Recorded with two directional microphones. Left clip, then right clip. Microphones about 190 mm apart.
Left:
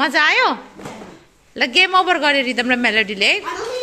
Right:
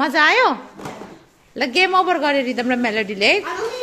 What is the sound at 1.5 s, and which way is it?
A woman's voice, 10° right (ahead or behind).